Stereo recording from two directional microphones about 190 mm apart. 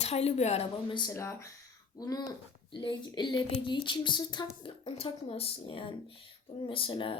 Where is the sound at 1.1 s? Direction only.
15° left (ahead or behind).